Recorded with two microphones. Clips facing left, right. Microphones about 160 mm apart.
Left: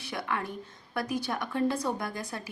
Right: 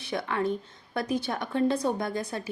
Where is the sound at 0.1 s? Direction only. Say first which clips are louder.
Right 6 dB; 25° right (ahead or behind).